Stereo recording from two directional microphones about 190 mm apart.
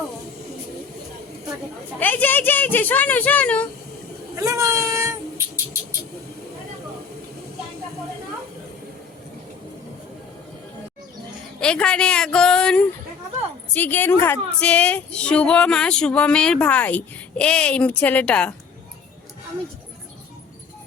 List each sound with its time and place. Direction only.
2.0 s speech: 10° left (ahead or behind)
4.4 s child singing: 15° right (ahead or behind)
11.6 s a woman's voice: 5° left (ahead or behind)